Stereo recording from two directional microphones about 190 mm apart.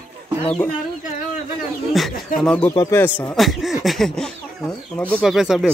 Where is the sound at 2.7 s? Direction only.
15° left (ahead or behind).